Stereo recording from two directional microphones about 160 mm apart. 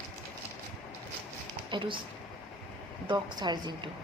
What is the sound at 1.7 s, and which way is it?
Speech, 30° right (ahead or behind).